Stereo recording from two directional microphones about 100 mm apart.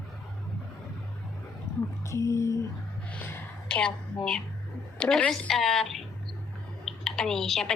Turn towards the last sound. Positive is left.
turn(degrees=5)  # may be behind; listen again after turning